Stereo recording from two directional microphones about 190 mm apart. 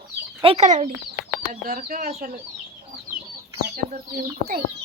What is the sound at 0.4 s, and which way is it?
Speech, 35° right (ahead or behind).